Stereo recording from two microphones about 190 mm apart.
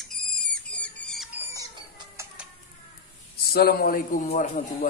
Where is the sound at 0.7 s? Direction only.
5° left (ahead or behind).